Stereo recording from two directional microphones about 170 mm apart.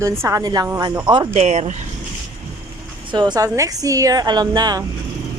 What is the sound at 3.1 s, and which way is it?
Speech, 25° right (ahead or behind).